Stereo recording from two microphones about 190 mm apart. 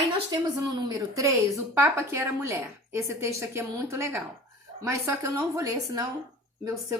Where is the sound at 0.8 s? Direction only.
20° right (ahead or behind).